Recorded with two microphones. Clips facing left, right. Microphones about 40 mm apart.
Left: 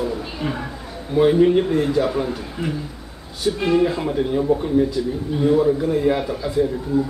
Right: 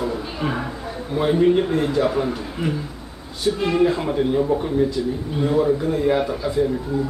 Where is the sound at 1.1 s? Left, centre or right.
Centre.